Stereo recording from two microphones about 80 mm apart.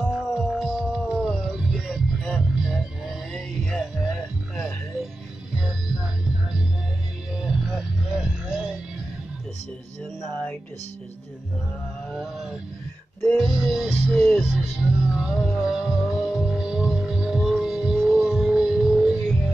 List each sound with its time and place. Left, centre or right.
0.1 s hum: centre
1.5 s music: centre
7.3 s music: centre
12.1 s a sound: centre
13.4 s music: centre